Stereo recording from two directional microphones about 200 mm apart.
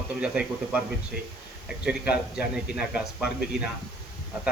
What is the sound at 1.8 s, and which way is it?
Speech, 5° right (ahead or behind).